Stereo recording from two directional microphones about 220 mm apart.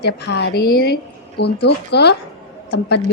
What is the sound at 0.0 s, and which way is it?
A woman's voice, 50° left (ahead or behind).